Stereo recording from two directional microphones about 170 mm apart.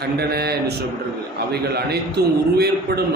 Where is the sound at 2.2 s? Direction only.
70° right (ahead or behind).